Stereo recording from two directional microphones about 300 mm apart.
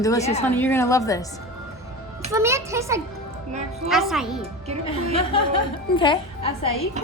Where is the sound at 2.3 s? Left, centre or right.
Centre.